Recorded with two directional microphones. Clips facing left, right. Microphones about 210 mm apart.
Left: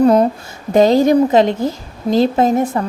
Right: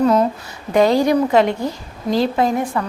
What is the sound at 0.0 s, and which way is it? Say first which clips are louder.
Speech: left 4 dB; 35° left (ahead or behind).